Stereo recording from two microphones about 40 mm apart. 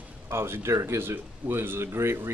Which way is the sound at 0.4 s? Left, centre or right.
Right.